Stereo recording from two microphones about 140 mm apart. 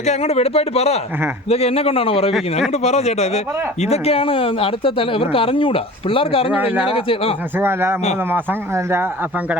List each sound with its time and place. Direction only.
0.0 s speech: 50° left (ahead or behind)
6.5 s speech: 10° right (ahead or behind)
6.8 s speech: 40° left (ahead or behind)
7.6 s speech: 15° right (ahead or behind)